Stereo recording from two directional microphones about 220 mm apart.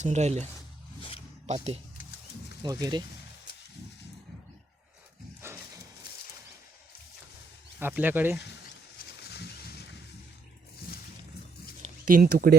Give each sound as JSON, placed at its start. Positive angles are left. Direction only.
{"t": 0.0, "sound": "speech", "side_deg": -30}
{"t": 2.6, "sound": "speech", "side_deg": -15}
{"t": 5.4, "sound": "a sound", "side_deg": -10}
{"t": 7.8, "sound": "speech", "side_deg": -10}
{"t": 9.0, "sound": "wild animals", "side_deg": 45}
{"t": 11.8, "sound": "a sound", "side_deg": -40}